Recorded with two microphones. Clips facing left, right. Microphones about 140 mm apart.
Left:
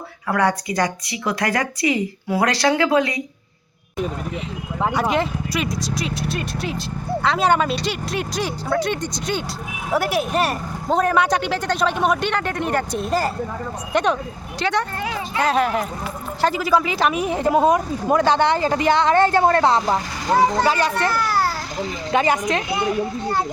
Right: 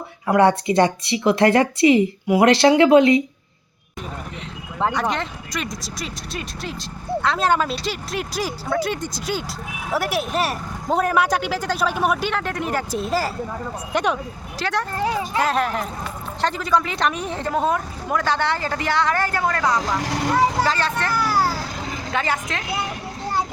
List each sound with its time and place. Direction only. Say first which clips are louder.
0.3 s a woman's voice: right 5 dB; 25° right (ahead or behind)
4.8 s speech: left 2 dB; 10° left (ahead or behind); by 20.0 s 30° left (ahead or behind)
20.0 s speech: right 5 dB; 75° right (ahead or behind)
20.7 s a woman's voice: left 3 dB; 15° left (ahead or behind)
21.1 s children playing: even; 10° right (ahead or behind)
22.1 s a woman's voice: left 6 dB; 20° left (ahead or behind)